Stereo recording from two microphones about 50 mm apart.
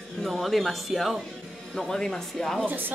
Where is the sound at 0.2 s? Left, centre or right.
Centre.